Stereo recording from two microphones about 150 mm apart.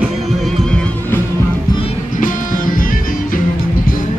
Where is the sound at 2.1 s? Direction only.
60° left (ahead or behind).